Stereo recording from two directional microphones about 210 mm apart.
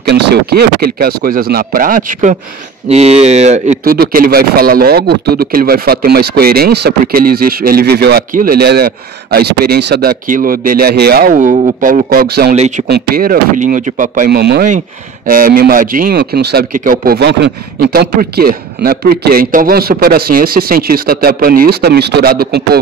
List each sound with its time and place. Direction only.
0.0 s speech: 50° right (ahead or behind)
12.5 s speech: 35° right (ahead or behind)
12.8 s speech: 45° right (ahead or behind)